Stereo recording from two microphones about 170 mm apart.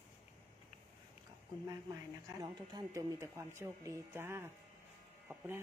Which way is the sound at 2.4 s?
25° right (ahead or behind).